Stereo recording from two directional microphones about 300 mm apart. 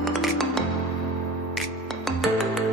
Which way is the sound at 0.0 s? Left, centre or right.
Centre.